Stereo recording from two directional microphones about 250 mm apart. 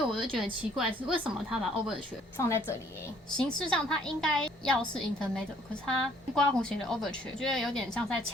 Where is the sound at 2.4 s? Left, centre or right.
Centre.